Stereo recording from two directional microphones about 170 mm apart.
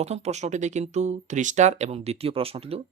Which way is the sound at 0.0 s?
40° right (ahead or behind).